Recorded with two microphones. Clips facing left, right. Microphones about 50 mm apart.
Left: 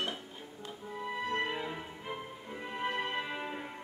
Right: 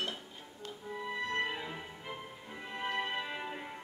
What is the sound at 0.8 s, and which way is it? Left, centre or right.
Music, centre.